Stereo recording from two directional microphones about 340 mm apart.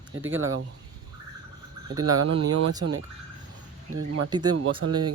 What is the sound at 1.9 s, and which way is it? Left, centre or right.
Speech, centre.